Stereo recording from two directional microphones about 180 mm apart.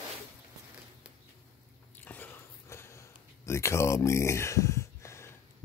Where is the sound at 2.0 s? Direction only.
10° left (ahead or behind).